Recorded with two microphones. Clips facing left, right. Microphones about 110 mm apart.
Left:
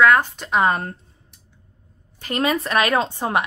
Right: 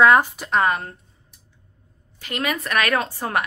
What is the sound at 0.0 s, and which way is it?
Speech, 20° right (ahead or behind).